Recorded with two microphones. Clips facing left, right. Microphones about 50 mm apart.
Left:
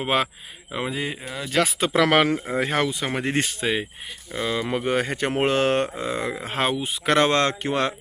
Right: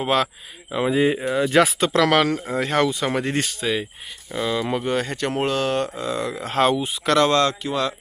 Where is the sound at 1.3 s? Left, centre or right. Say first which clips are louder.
Right 11 dB; right.